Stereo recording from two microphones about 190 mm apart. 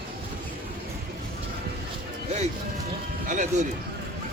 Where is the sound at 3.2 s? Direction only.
40° right (ahead or behind).